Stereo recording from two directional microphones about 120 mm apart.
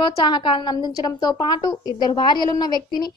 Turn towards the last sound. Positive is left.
turn(degrees=35)  # may be behind; listen again after turning